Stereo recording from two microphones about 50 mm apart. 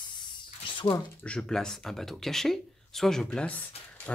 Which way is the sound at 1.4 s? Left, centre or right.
Centre.